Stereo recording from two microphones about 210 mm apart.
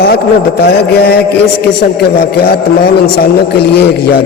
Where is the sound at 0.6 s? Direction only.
50° left (ahead or behind).